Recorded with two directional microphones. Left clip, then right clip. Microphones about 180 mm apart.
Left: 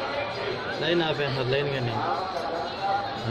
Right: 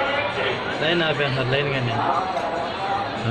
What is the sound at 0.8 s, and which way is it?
Speech, 20° left (ahead or behind).